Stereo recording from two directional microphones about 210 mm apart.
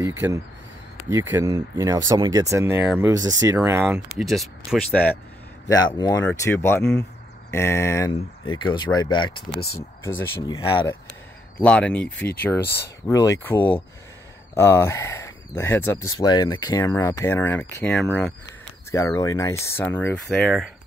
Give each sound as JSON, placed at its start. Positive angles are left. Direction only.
{"t": 0.0, "sound": "speech", "side_deg": -10}
{"t": 4.2, "sound": "speech", "side_deg": 0}
{"t": 5.7, "sound": "speech", "side_deg": 20}
{"t": 11.6, "sound": "speech", "side_deg": 5}
{"t": 12.6, "sound": "speech", "side_deg": 50}
{"t": 13.0, "sound": "speech", "side_deg": 15}